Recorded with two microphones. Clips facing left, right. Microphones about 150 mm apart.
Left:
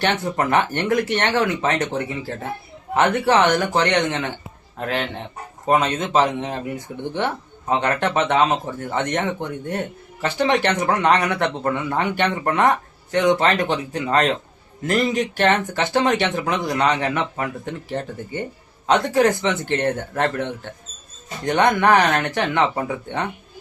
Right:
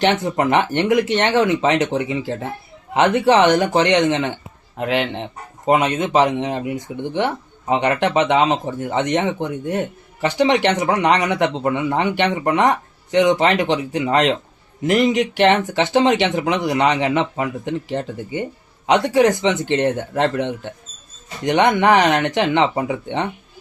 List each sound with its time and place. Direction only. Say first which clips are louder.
0.0 s speech: right 4 dB; 20° right (ahead or behind)